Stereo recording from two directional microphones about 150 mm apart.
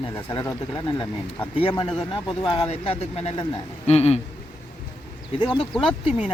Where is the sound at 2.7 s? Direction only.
45° left (ahead or behind).